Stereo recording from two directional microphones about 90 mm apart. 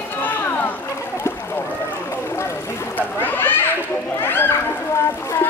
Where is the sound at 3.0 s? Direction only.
25° left (ahead or behind).